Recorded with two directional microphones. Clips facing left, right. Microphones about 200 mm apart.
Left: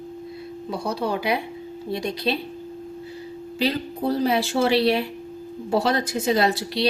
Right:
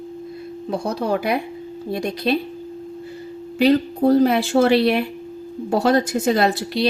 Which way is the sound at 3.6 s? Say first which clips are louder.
Right 8 dB; 50° right (ahead or behind).